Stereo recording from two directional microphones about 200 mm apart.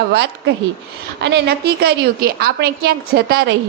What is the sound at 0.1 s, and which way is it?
A woman's voice, 55° right (ahead or behind).